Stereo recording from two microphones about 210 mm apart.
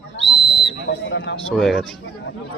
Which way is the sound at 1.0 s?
55° left (ahead or behind).